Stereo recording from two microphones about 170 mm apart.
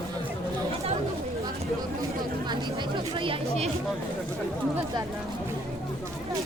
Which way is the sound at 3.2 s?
35° right (ahead or behind).